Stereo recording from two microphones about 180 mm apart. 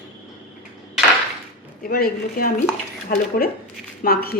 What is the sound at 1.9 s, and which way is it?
Speech, 55° left (ahead or behind).